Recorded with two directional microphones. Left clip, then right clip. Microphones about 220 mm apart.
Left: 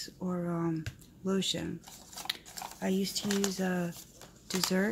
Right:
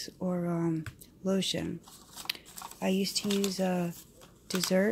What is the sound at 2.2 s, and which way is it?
Typing, 20° right (ahead or behind).